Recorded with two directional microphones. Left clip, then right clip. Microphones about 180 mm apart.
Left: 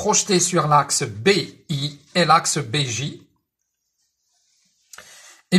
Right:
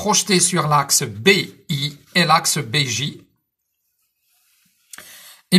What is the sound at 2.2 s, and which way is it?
Speech, 35° left (ahead or behind).